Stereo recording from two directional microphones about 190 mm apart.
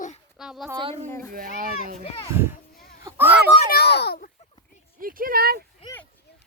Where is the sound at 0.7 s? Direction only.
30° right (ahead or behind).